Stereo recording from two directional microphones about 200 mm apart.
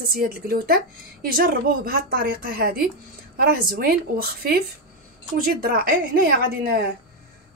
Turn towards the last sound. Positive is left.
turn(degrees=-45)  # may be behind; listen again after turning